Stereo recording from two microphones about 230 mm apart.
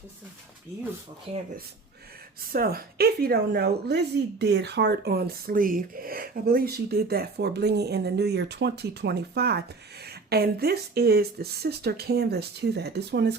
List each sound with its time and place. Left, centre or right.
1.3 s speech: right
2.5 s a woman's voice: right